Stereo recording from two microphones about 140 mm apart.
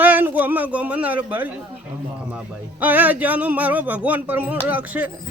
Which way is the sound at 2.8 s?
10° right (ahead or behind).